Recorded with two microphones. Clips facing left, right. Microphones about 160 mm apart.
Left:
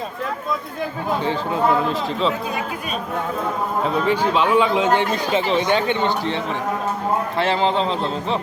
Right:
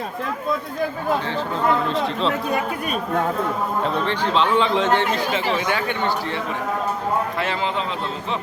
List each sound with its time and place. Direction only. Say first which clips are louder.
3.8 s a man's voice: left 6 dB; 5° left (ahead or behind); by 8.4 s 30° left (ahead or behind)